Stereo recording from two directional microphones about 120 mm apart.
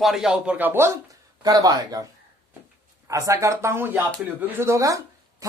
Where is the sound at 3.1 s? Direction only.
25° right (ahead or behind).